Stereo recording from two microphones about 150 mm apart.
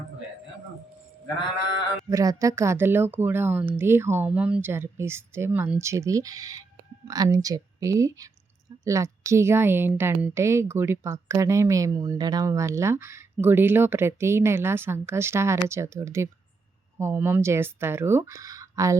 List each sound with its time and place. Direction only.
2.0 s a woman's voice: 20° right (ahead or behind)